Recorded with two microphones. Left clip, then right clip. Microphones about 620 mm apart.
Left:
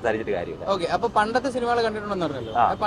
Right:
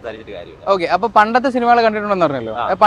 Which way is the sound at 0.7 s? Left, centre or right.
Right.